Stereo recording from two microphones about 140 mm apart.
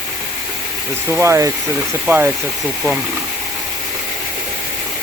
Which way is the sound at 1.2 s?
20° right (ahead or behind).